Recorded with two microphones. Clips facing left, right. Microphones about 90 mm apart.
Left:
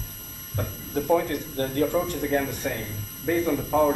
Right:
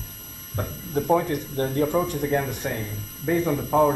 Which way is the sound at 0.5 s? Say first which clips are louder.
Right 2 dB; 20° right (ahead or behind).